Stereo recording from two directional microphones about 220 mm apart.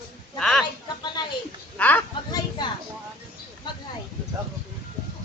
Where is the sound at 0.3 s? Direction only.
5° left (ahead or behind).